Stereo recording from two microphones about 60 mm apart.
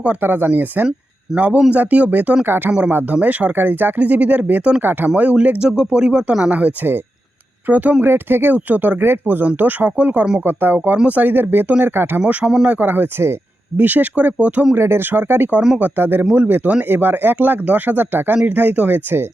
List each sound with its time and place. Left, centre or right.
0.2 s speech: right
1.3 s speech: centre
1.7 s speech: right
8.0 s speech: right
12.2 s speech: right
14.8 s speech: right
16.3 s speech: right
16.9 s speech: right